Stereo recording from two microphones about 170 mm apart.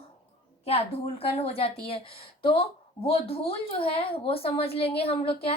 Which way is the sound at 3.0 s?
35° left (ahead or behind).